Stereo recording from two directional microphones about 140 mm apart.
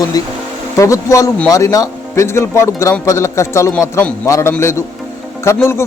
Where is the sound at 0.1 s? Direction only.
25° left (ahead or behind).